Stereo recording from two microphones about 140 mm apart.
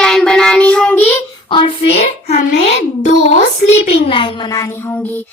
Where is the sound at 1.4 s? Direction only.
35° left (ahead or behind).